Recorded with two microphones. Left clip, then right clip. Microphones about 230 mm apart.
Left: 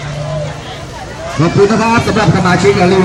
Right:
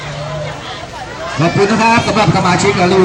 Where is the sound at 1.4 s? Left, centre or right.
Right.